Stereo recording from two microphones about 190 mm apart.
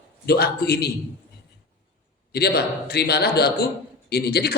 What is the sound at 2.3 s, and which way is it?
Speech, 60° left (ahead or behind).